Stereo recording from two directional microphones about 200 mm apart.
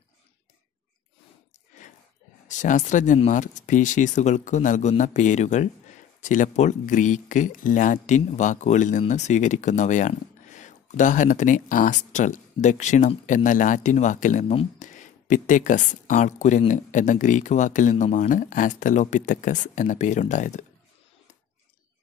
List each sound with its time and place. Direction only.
2.4 s speech: 40° left (ahead or behind)